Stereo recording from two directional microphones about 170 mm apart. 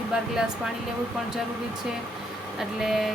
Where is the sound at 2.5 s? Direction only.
Centre (ahead or behind).